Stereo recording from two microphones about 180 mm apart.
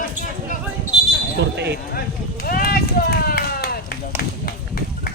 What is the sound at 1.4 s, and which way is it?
Speech, 70° right (ahead or behind).